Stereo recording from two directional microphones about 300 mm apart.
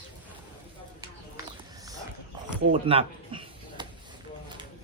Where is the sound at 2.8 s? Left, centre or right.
Centre.